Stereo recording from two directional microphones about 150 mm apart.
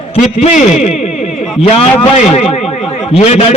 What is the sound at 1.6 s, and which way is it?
A man's voice, 40° left (ahead or behind).